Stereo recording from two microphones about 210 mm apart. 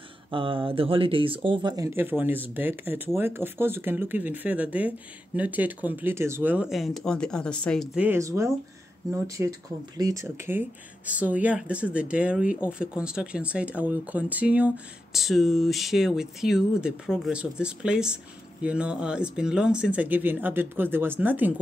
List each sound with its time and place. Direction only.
0.3 s speech: 25° right (ahead or behind); by 21.5 s 10° right (ahead or behind)